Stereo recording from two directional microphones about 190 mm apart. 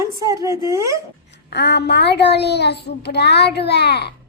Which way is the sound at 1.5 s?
65° left (ahead or behind).